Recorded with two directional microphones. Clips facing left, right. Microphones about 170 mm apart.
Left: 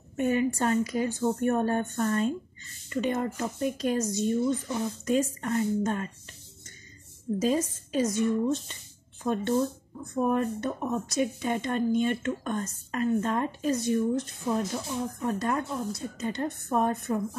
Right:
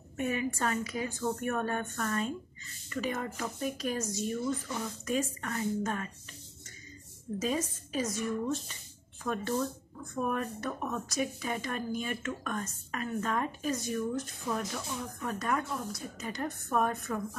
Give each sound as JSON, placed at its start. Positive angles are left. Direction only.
{"t": 0.2, "sound": "speech", "side_deg": 30}
{"t": 7.4, "sound": "speech", "side_deg": 30}